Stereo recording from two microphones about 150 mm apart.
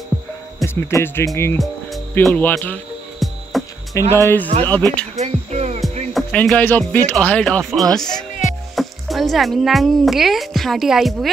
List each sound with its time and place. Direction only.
0.7 s speech: 15° left (ahead or behind)
2.2 s music: 5° left (ahead or behind)
3.9 s speech: 15° left (ahead or behind)
5.2 s speech: 45° right (ahead or behind)
6.1 s speech: 5° left (ahead or behind)